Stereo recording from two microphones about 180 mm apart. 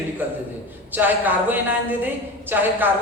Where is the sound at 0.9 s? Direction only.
10° right (ahead or behind).